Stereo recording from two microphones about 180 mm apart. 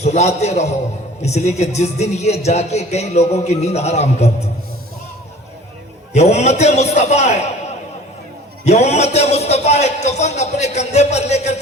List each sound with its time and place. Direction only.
0.0 s speech: 40° left (ahead or behind)
6.1 s speech: 40° left (ahead or behind)
8.6 s speech: 35° left (ahead or behind)